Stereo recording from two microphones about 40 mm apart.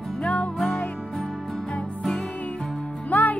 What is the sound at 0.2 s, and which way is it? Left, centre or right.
Music, left.